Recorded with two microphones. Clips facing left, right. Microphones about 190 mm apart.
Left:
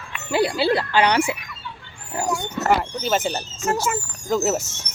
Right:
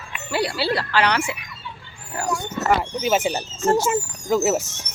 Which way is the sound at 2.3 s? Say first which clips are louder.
Even; 10° left (ahead or behind).